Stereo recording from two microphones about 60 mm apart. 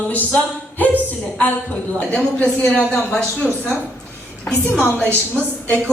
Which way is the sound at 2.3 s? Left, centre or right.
Centre.